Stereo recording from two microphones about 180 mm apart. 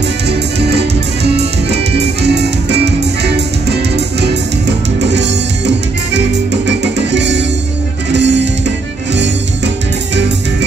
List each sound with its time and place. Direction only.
0.3 s music: 70° right (ahead or behind)